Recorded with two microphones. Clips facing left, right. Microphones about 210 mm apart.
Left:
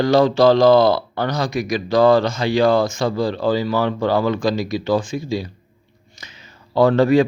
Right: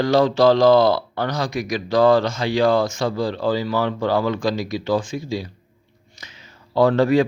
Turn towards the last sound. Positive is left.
turn(degrees=40)  # may be behind; listen again after turning